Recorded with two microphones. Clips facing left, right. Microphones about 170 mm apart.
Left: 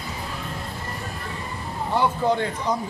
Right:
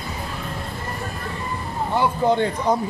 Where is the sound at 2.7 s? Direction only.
55° right (ahead or behind).